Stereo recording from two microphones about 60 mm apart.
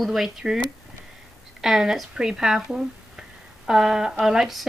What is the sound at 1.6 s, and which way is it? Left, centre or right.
Speech, centre.